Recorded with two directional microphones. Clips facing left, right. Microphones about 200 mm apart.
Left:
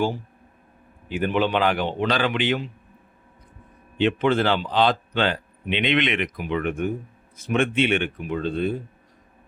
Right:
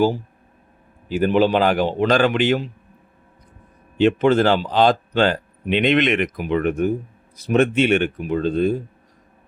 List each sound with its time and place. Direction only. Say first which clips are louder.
1.0 s a man's voice: right 6 dB; 35° right (ahead or behind)
3.9 s a man's voice: right 5 dB; 40° right (ahead or behind)